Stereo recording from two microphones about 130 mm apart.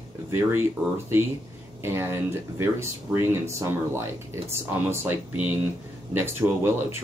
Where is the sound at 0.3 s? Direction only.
15° right (ahead or behind).